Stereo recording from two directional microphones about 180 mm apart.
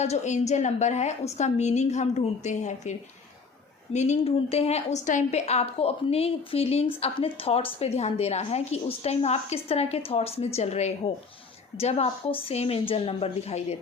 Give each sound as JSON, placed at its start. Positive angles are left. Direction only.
{"t": 0.0, "sound": "a woman's voice", "side_deg": 40}
{"t": 3.9, "sound": "a woman's voice", "side_deg": 40}